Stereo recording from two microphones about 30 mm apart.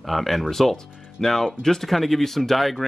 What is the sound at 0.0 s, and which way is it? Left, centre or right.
A man's voice, centre.